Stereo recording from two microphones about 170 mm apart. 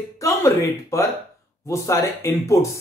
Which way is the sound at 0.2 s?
15° left (ahead or behind).